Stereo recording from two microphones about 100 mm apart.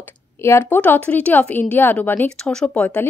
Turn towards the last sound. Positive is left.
turn(degrees=15)  # may be behind; listen again after turning